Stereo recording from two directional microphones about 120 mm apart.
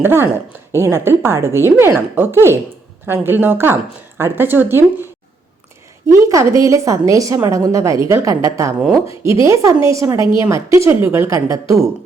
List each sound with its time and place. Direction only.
0.0 s a woman's voice: 20° right (ahead or behind)
6.1 s a woman's voice: 25° right (ahead or behind)